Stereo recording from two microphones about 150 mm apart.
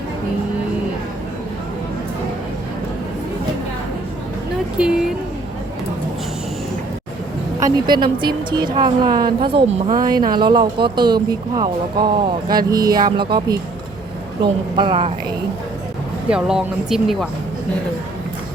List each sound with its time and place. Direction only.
4.8 s speech: 5° right (ahead or behind)
7.6 s a woman's voice: 30° right (ahead or behind)
10.0 s a woman's voice: 25° right (ahead or behind)
16.3 s speech: 5° right (ahead or behind)